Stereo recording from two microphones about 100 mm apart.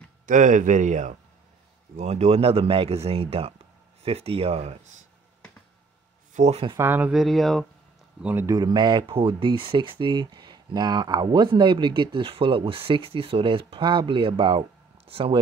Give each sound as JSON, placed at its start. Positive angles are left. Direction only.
{"t": 2.0, "sound": "speech", "side_deg": -90}
{"t": 4.0, "sound": "speech", "side_deg": -85}
{"t": 6.4, "sound": "speech", "side_deg": -90}
{"t": 6.8, "sound": "speech", "side_deg": -20}
{"t": 7.1, "sound": "speech", "side_deg": 0}
{"t": 8.2, "sound": "speech", "side_deg": -15}
{"t": 8.5, "sound": "speech", "side_deg": -45}
{"t": 9.0, "sound": "speech", "side_deg": -65}
{"t": 15.0, "sound": "speech", "side_deg": -70}